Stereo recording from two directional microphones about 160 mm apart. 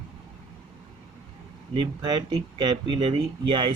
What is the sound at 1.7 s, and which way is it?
Speech, 30° right (ahead or behind).